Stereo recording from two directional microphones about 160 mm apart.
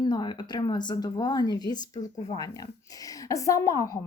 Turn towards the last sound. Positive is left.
turn(degrees=20)  # may be behind; listen again after turning